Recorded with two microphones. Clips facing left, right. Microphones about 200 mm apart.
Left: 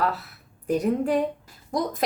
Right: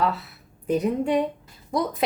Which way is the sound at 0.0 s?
Centre (ahead or behind).